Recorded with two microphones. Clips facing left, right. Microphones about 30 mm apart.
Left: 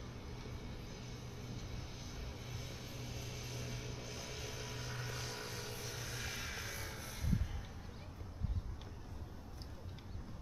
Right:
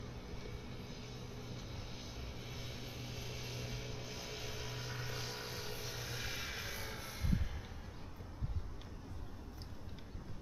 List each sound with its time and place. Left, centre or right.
0.3 s vehicle: centre
2.5 s vehicle: centre